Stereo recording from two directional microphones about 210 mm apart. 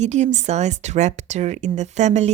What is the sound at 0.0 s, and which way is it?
Speech, 35° right (ahead or behind).